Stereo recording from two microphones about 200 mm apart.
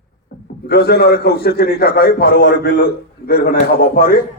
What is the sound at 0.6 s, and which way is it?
A man's voice, 55° left (ahead or behind).